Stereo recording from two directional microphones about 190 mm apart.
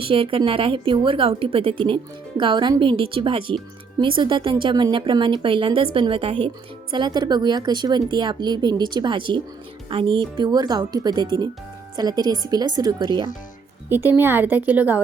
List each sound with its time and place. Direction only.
0.0 s speech: 30° right (ahead or behind)
13.9 s speech: 10° right (ahead or behind)